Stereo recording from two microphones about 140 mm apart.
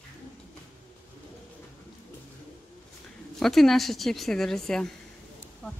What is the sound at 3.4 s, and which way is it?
A woman's voice, centre (ahead or behind).